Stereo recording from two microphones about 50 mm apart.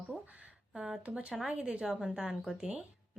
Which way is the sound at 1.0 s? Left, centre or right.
Right.